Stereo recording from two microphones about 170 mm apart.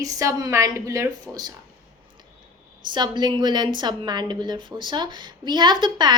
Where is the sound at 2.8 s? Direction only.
25° right (ahead or behind).